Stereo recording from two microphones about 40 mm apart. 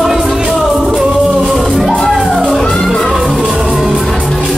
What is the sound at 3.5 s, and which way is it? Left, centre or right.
Music, centre.